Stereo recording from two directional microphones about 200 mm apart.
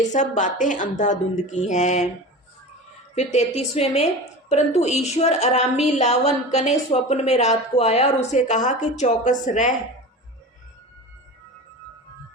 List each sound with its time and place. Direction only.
0.0 s a woman's voice: 40° left (ahead or behind)
3.2 s a woman's voice: 30° left (ahead or behind)